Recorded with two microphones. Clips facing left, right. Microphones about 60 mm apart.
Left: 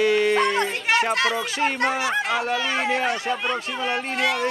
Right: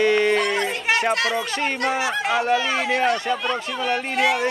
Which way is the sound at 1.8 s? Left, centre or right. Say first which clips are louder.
Right 1 dB; centre.